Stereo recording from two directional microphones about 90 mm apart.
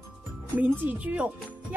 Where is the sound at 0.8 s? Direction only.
15° right (ahead or behind).